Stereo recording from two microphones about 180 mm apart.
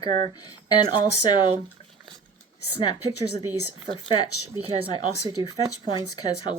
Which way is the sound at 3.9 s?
25° left (ahead or behind).